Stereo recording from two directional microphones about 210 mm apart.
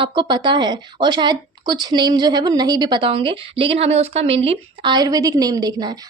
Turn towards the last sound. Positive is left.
turn(degrees=-15)  # may be behind; listen again after turning